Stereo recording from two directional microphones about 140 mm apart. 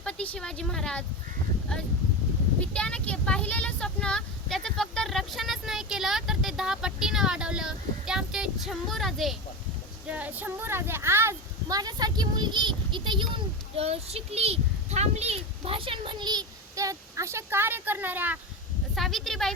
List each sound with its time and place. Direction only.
0.0 s speech: 10° left (ahead or behind)
2.7 s speech: 10° left (ahead or behind)
10.1 s a woman's voice: 10° right (ahead or behind)
18.9 s speech: centre (ahead or behind)